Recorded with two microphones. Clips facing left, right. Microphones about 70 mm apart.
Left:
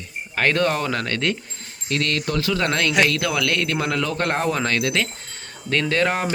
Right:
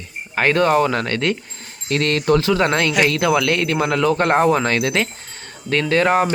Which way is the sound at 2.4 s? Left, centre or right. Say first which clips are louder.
Right 4 dB; centre.